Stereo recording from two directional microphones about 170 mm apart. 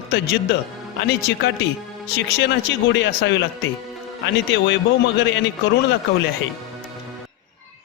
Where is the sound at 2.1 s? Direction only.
90° left.